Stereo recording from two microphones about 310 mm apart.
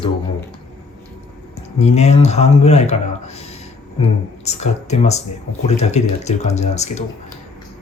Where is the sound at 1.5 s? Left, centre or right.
Left.